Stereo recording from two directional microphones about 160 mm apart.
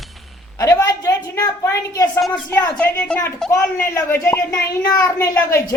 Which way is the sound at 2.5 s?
10° left (ahead or behind).